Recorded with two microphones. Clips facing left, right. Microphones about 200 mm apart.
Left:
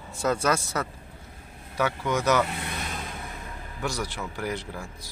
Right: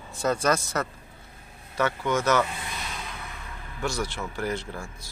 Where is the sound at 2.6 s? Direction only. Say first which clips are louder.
Left 3 dB; 50° left (ahead or behind).